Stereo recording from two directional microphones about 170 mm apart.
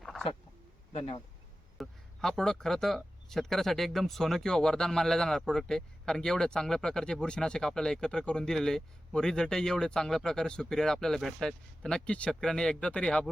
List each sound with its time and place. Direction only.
0.0 s a sound: centre (ahead or behind)
0.9 s speech: 35° left (ahead or behind)
1.8 s speech: centre (ahead or behind)